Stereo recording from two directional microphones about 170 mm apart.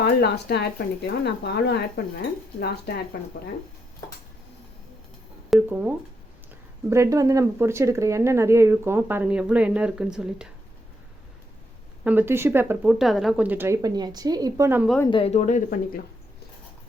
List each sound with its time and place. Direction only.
0.0 s speech: 75° left (ahead or behind)
5.5 s speech: 10° right (ahead or behind)
12.0 s speech: 10° right (ahead or behind)
15.1 s speech: 40° left (ahead or behind)